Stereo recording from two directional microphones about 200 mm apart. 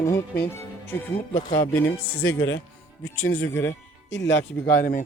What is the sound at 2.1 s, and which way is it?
Speech, 80° left.